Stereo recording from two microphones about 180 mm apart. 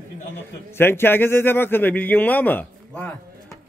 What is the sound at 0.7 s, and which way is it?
A man's voice, 10° left (ahead or behind).